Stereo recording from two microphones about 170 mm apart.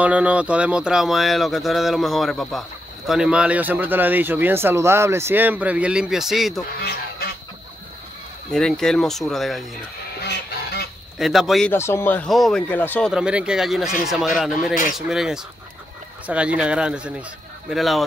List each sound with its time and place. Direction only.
0.0 s speech: 10° right (ahead or behind)
6.8 s speech: 65° left (ahead or behind)
8.5 s speech: 5° left (ahead or behind)
10.2 s goose: 70° left (ahead or behind)
11.1 s speech: centre (ahead or behind)
11.7 s speech: 15° left (ahead or behind)
13.1 s speech: 5° right (ahead or behind)